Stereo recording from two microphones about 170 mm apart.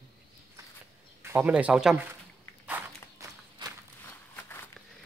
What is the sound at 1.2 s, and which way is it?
Speech, 10° right (ahead or behind).